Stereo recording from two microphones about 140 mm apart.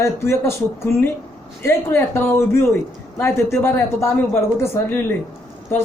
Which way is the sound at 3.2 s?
15° left (ahead or behind).